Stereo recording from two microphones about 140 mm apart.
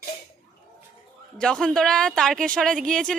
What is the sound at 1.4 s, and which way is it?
Speech, 5° left (ahead or behind).